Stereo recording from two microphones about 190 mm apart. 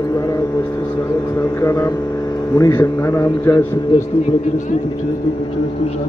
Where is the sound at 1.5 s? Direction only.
15° left (ahead or behind).